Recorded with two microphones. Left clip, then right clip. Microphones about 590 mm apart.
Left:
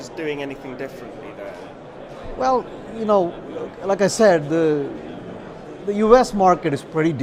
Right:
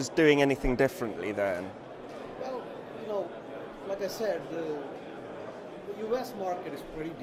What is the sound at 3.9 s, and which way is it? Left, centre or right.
Speech, left.